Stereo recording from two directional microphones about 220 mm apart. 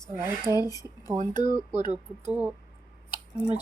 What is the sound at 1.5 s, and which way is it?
Speech, 35° right (ahead or behind).